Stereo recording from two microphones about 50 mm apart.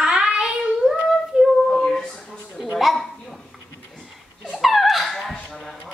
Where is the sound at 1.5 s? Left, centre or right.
Centre.